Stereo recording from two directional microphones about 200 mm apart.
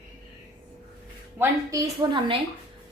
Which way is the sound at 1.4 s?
15° right (ahead or behind).